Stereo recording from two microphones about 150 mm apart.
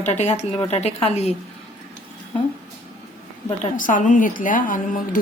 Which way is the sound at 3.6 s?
60° left (ahead or behind).